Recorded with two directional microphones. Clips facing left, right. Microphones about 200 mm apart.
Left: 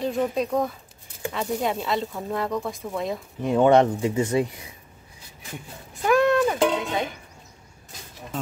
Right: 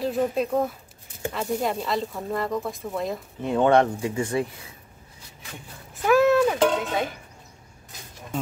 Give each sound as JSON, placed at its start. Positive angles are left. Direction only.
{"t": 0.0, "sound": "speech", "side_deg": -5}
{"t": 3.4, "sound": "speech", "side_deg": 15}
{"t": 6.0, "sound": "music", "side_deg": -5}